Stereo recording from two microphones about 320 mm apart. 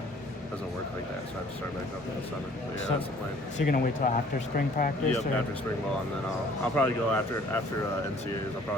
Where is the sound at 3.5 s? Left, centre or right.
Left.